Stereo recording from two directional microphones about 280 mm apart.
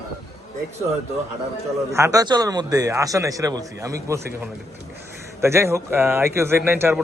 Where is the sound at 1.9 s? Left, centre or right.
Centre.